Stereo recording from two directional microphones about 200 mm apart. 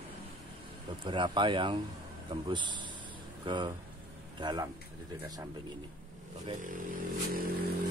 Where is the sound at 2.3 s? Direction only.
25° right (ahead or behind).